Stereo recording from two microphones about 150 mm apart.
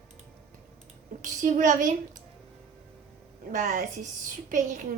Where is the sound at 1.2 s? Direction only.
55° right (ahead or behind).